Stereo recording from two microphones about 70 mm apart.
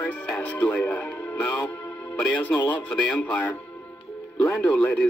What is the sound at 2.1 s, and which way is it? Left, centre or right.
Music, left.